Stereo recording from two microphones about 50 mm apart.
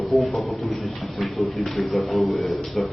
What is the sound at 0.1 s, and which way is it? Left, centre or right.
Speech, centre.